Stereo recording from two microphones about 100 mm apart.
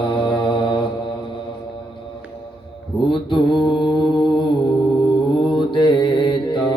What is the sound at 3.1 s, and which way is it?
Mantra, 55° left (ahead or behind).